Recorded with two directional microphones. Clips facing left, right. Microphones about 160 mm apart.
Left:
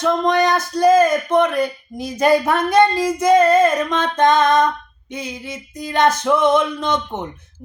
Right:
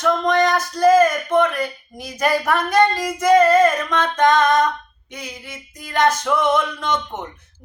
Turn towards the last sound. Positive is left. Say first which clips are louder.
# left 2 dB
turn(degrees=20)  # may be behind; listen again after turning